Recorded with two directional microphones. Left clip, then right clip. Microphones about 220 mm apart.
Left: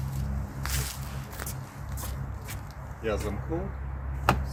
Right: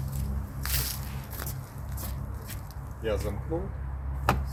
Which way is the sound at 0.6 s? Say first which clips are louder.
Right 1 dB; 15° right (ahead or behind).